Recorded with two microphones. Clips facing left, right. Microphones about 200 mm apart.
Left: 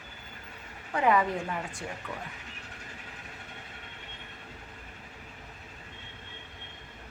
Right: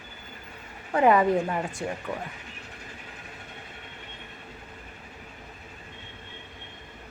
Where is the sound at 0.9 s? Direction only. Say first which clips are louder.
Right 6 dB; 45° right (ahead or behind).